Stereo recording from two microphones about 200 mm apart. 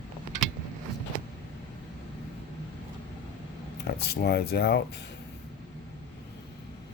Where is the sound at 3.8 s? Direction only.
55° left (ahead or behind).